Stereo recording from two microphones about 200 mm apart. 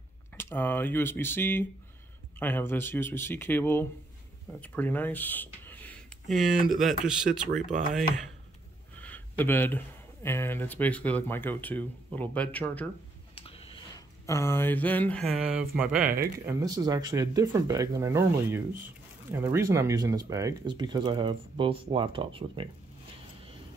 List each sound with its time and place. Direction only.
0.4 s speech: 10° left (ahead or behind)
9.0 s speech: 10° left (ahead or behind)
13.3 s a sound: 30° left (ahead or behind)
14.2 s speech: 15° left (ahead or behind); by 16.1 s 5° right (ahead or behind)
16.4 s speech: 20° right (ahead or behind)